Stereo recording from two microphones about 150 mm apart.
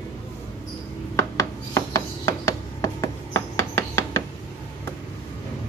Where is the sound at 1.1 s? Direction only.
20° left (ahead or behind).